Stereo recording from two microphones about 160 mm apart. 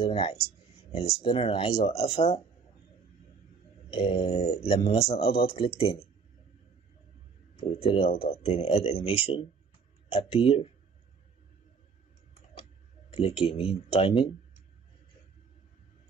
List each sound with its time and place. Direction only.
0.0 s speech: 40° left (ahead or behind)
3.9 s speech: 35° left (ahead or behind)
7.5 s speech: 35° left (ahead or behind)
13.1 s speech: 35° left (ahead or behind)